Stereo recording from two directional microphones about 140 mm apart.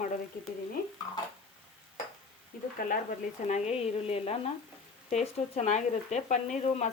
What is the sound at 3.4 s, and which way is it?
Speech, 55° left (ahead or behind).